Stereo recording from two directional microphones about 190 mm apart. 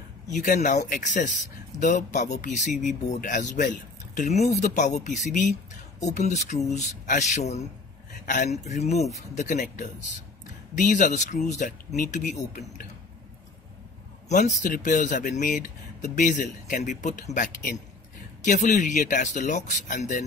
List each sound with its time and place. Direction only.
0.3 s speech: 40° left (ahead or behind)
14.3 s speech: 40° left (ahead or behind)